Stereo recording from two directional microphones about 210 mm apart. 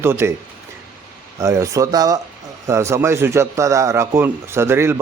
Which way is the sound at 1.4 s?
15° right (ahead or behind).